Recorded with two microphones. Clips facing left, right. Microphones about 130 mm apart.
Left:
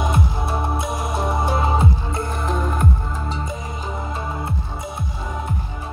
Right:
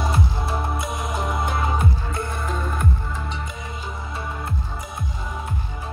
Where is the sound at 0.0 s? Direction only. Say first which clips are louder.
Left 2 dB; 20° left (ahead or behind).